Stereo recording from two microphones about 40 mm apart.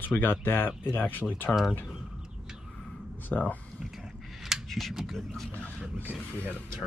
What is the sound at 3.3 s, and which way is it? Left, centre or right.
Speech, left.